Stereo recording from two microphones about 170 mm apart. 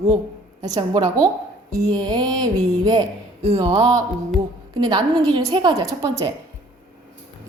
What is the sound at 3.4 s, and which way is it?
Speech, 40° right (ahead or behind).